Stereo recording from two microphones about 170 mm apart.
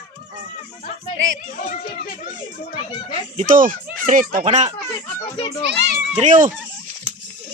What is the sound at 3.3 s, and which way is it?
Speech, 50° right (ahead or behind).